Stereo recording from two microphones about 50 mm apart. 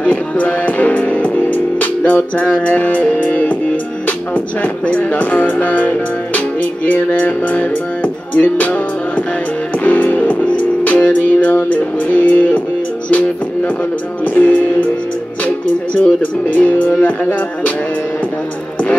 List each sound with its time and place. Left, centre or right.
0.0 s music: left
3.1 s speech: left
4.6 s speech: left
9.8 s music: left
14.2 s music: left
15.4 s speech: left